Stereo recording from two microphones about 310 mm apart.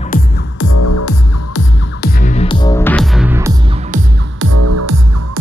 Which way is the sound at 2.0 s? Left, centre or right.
Left.